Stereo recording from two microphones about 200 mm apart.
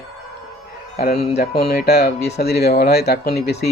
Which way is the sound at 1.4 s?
50° left (ahead or behind).